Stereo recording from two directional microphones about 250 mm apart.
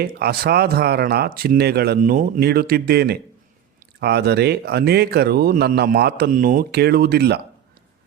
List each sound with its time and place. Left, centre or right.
0.0 s speech: right